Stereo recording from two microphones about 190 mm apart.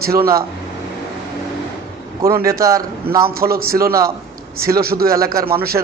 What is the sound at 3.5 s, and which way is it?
Speech, 50° right (ahead or behind).